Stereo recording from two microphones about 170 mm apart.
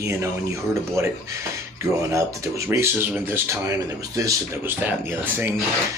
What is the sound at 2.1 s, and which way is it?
Speech, 15° right (ahead or behind).